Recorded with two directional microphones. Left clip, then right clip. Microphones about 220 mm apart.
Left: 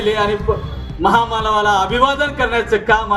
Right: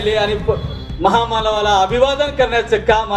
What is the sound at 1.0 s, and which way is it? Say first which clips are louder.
Speech: even; 40° left (ahead or behind).